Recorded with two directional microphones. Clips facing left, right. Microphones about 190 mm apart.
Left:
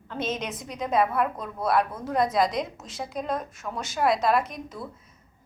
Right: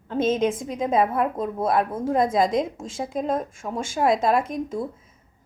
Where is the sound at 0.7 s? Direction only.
25° right (ahead or behind).